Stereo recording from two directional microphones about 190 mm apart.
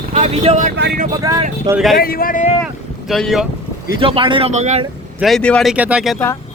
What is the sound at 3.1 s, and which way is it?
Speech, centre (ahead or behind).